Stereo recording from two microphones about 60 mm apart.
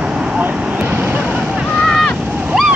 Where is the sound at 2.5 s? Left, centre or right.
Centre.